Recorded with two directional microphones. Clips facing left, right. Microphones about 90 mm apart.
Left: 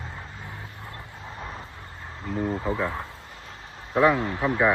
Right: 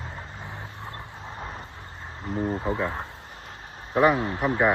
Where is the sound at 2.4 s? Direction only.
20° right (ahead or behind).